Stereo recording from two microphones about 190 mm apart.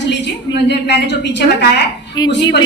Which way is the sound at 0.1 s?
65° left (ahead or behind).